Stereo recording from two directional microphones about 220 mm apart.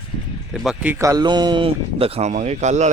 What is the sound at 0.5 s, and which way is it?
Speech, centre (ahead or behind).